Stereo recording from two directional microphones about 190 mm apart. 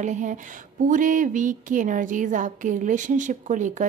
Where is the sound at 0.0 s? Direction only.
40° right (ahead or behind).